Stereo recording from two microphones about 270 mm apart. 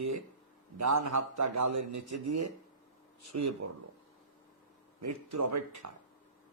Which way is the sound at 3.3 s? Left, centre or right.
Right.